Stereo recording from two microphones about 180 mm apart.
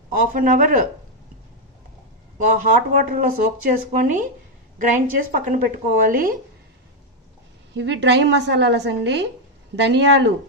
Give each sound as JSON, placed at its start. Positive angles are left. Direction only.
{"t": 0.1, "sound": "speech", "side_deg": -50}
{"t": 2.3, "sound": "speech", "side_deg": -45}
{"t": 7.7, "sound": "a woman's voice", "side_deg": -75}